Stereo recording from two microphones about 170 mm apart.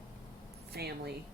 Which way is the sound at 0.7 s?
70° right (ahead or behind).